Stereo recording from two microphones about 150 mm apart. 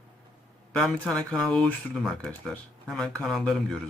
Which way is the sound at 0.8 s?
5° left (ahead or behind).